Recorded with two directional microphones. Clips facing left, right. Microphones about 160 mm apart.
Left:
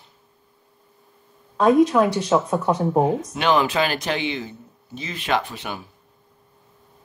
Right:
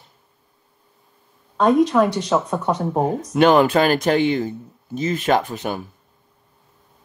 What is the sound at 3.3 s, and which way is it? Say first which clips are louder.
A man's voice: right 8 dB; 50° right (ahead or behind).